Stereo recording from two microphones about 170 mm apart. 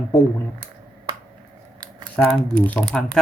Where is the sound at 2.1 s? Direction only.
10° left (ahead or behind).